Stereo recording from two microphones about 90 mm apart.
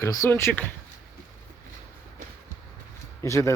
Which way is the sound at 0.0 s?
35° left (ahead or behind).